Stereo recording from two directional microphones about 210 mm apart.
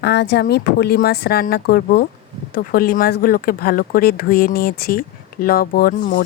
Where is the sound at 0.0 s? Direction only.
55° left (ahead or behind).